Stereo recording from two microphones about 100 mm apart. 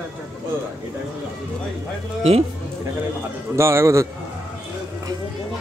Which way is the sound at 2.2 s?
90° right.